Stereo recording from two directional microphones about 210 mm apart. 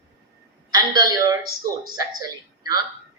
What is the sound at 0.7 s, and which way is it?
Speech, 20° right (ahead or behind).